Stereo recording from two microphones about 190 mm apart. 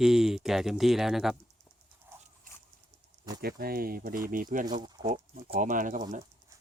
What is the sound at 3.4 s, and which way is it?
Speech, 50° right (ahead or behind).